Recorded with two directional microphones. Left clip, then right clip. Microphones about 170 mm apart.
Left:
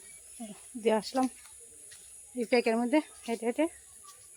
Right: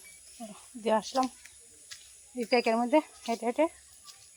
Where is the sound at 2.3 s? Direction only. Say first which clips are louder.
Right 1 dB; centre (ahead or behind).